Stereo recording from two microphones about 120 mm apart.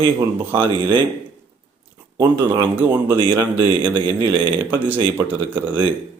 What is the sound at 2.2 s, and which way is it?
Speech, 40° right (ahead or behind).